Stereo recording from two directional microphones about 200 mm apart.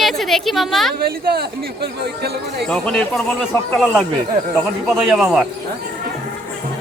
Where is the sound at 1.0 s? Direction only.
50° right (ahead or behind).